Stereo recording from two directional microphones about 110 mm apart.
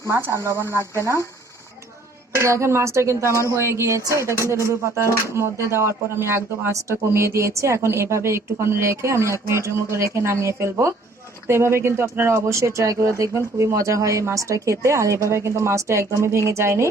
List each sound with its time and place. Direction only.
0.1 s speech: 25° right (ahead or behind)
2.3 s speech: 25° right (ahead or behind)